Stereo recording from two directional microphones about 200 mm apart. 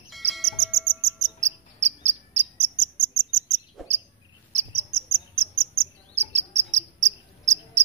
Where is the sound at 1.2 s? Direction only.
35° right (ahead or behind).